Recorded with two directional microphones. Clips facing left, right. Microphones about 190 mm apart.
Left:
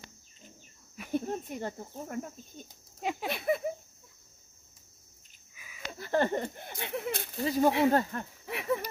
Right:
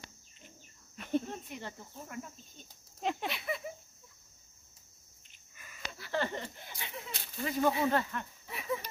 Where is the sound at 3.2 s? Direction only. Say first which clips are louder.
Left 7 dB; 50° left (ahead or behind).